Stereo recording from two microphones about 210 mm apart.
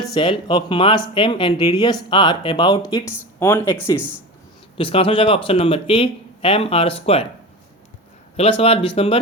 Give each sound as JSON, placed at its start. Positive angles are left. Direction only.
{"t": 0.1, "sound": "speech", "side_deg": 25}
{"t": 4.8, "sound": "speech", "side_deg": 25}
{"t": 8.4, "sound": "speech", "side_deg": 25}